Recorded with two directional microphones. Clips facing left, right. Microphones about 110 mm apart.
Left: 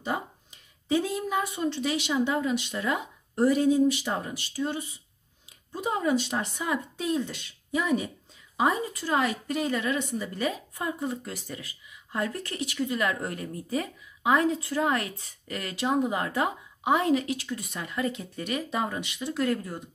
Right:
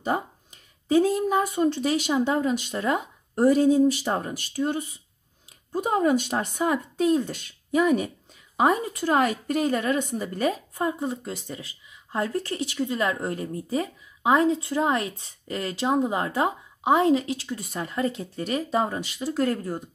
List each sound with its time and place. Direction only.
0.8 s speech: 45° right (ahead or behind)
10.9 s speech: 25° right (ahead or behind)